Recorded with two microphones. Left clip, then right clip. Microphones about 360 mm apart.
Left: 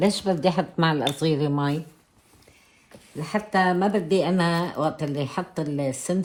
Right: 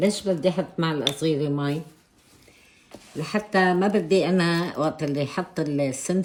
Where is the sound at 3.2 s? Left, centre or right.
Centre.